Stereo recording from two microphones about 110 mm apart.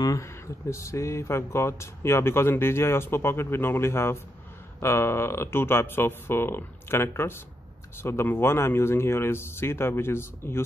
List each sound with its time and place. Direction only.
0.0 s speech: 30° left (ahead or behind)